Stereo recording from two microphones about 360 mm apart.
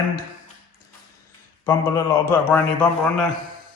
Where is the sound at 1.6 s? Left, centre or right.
Centre.